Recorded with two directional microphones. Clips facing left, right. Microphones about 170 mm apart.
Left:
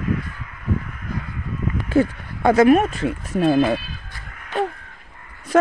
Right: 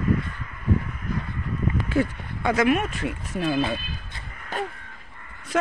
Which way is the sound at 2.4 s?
40° left (ahead or behind).